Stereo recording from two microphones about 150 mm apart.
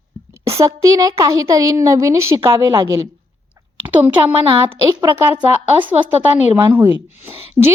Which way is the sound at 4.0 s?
10° right (ahead or behind).